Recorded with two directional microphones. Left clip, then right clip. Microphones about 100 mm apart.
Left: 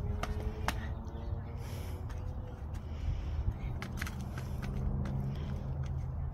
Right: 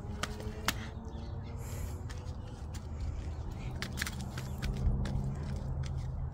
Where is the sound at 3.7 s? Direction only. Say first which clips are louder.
Right 5 dB; 20° right (ahead or behind).